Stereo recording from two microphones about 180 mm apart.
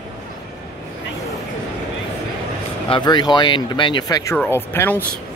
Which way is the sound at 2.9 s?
25° left (ahead or behind).